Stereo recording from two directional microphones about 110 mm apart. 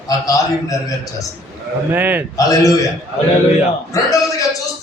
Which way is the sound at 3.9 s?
30° left (ahead or behind).